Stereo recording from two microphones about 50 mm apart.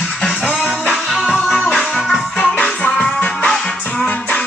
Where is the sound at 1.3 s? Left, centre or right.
Centre.